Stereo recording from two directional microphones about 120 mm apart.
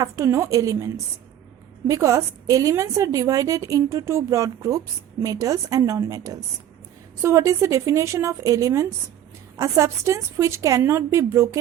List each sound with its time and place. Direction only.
0.0 s a woman's voice: 25° right (ahead or behind)